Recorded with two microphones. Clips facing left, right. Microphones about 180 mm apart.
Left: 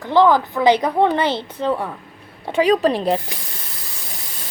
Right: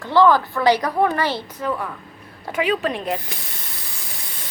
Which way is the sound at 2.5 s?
35° left (ahead or behind).